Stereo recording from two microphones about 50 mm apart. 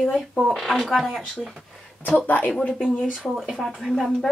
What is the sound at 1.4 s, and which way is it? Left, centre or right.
Speech, centre.